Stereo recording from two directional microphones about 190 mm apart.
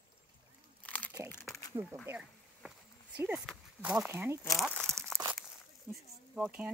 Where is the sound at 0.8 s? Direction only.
5° left (ahead or behind).